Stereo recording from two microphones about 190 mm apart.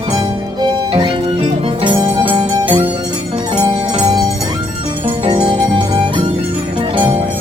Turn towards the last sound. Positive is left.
turn(degrees=-25)  # may be behind; listen again after turning